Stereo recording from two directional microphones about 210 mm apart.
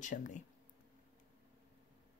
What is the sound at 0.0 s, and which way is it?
Speech, 35° left (ahead or behind).